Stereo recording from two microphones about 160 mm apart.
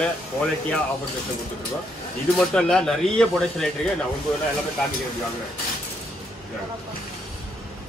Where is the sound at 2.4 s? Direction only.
5° left (ahead or behind).